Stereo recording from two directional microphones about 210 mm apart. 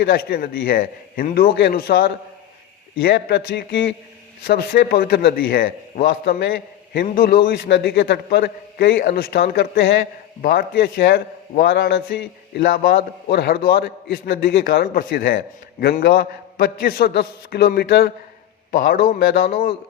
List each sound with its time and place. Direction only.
0.0 s a man's voice: 45° left (ahead or behind)